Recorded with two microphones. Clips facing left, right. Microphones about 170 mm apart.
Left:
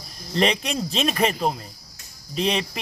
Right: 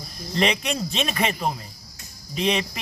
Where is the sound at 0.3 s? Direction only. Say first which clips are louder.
Left 1 dB; 35° left (ahead or behind).